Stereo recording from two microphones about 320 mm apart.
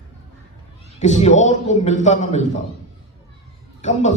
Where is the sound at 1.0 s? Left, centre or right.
Left.